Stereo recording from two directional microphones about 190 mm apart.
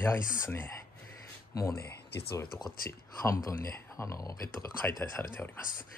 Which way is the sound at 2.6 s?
15° left (ahead or behind).